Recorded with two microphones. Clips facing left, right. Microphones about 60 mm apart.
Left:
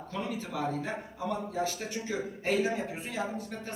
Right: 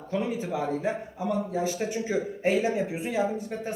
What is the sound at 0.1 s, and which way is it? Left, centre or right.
A woman's voice, centre.